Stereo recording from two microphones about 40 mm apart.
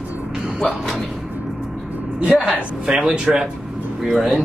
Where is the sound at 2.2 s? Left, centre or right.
Right.